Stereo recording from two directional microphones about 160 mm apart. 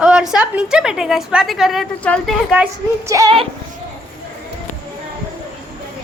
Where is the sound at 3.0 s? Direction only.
20° right (ahead or behind).